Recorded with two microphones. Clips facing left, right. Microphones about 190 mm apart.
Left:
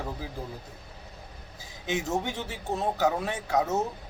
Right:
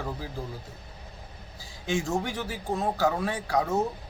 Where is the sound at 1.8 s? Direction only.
20° left (ahead or behind).